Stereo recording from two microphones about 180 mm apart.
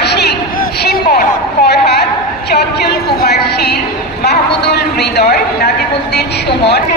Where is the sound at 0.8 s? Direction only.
60° left (ahead or behind).